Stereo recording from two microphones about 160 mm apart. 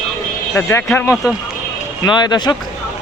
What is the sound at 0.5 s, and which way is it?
Speech, 15° left (ahead or behind).